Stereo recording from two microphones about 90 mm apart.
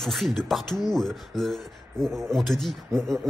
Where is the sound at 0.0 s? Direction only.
Centre (ahead or behind).